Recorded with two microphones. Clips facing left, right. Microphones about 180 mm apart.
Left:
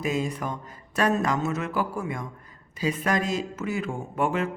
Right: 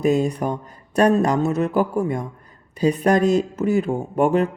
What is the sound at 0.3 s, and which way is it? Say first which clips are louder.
Speech: right 8 dB; 35° right (ahead or behind).